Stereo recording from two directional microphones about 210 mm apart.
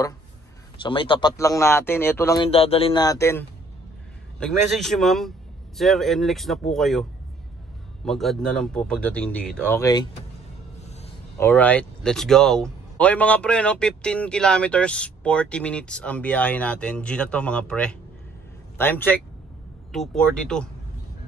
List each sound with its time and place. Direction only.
0.8 s speech: 25° left (ahead or behind)
4.4 s speech: centre (ahead or behind)
11.3 s speech: 10° left (ahead or behind)